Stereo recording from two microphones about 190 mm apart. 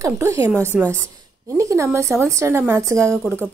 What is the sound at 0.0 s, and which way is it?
A woman's voice, 15° right (ahead or behind).